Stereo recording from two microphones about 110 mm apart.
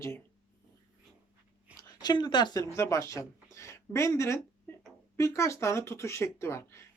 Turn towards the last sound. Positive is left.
turn(degrees=25)  # may be behind; listen again after turning